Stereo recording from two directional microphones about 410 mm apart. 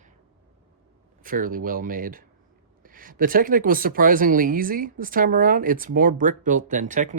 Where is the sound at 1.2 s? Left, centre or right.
Centre.